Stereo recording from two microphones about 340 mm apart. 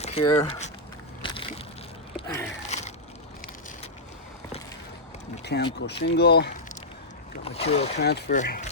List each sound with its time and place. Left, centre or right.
0.0 s speech: centre
1.2 s vehicle: centre
2.2 s a sound: centre
2.6 s crushing: centre
5.4 s a sound: left
6.0 s speech: left
7.4 s speech: centre